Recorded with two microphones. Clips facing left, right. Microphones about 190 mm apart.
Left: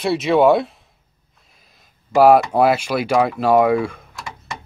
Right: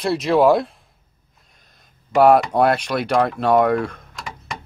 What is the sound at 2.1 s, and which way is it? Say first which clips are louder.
Speech: left 1 dB; 5° left (ahead or behind).